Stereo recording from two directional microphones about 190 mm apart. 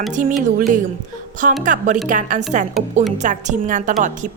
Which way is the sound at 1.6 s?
40° right (ahead or behind).